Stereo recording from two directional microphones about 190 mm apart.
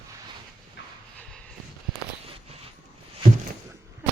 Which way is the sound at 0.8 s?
65° left (ahead or behind).